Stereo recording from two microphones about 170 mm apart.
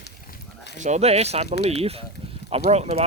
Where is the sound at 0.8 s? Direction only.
45° right (ahead or behind).